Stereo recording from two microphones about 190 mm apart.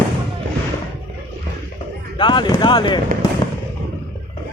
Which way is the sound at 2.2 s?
25° left (ahead or behind).